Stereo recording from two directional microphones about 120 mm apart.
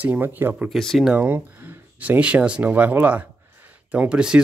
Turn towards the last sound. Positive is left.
turn(degrees=-5)  # may be behind; listen again after turning